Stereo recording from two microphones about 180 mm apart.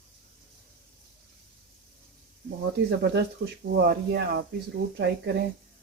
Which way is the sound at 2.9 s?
65° right (ahead or behind).